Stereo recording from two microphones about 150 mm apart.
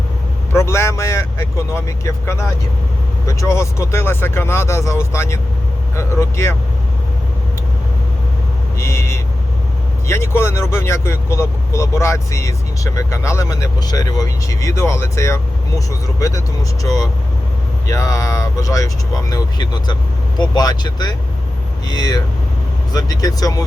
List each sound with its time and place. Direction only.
0.5 s speech: 15° left (ahead or behind)
8.8 s vehicle: 20° left (ahead or behind)
10.1 s speech: 15° left (ahead or behind)